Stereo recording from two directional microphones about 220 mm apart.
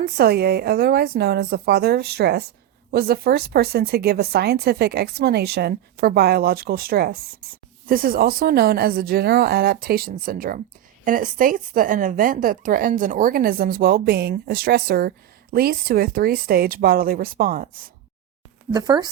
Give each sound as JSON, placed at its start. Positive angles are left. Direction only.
{"t": 0.0, "sound": "a woman's voice", "side_deg": -45}
{"t": 18.7, "sound": "speech", "side_deg": -20}